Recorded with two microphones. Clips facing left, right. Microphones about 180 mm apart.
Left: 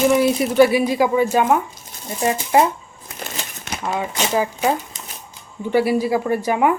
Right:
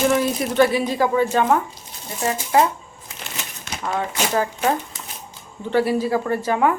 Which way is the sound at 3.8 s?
10° left (ahead or behind).